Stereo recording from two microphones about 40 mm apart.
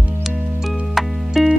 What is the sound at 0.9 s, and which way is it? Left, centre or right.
Music, centre.